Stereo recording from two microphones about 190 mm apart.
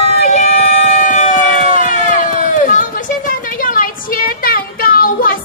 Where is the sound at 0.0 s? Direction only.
35° left (ahead or behind).